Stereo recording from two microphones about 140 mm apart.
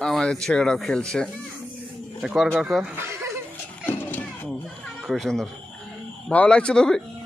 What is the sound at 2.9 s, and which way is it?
Chuckle, 20° right (ahead or behind).